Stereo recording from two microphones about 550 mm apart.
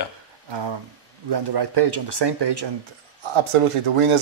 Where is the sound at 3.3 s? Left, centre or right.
Right.